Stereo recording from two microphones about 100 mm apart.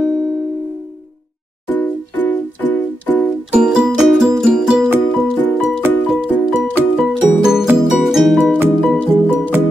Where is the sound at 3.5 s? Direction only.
5° right (ahead or behind).